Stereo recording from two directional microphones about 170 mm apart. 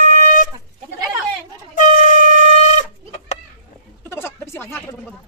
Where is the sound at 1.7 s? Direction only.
50° left (ahead or behind).